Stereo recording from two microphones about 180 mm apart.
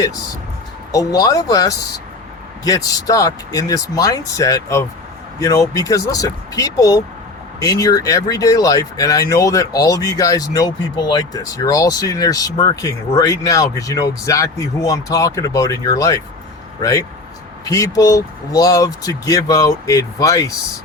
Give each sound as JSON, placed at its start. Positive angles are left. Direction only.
{"t": 0.9, "sound": "speech", "side_deg": 20}
{"t": 17.7, "sound": "speech", "side_deg": 20}